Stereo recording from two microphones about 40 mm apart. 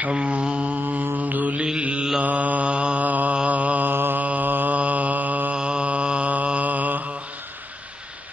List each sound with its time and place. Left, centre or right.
0.1 s mantra: right
0.7 s mantra: right
1.6 s mantra: right
3.9 s mantra: right
4.2 s mantra: right
5.6 s mantra: right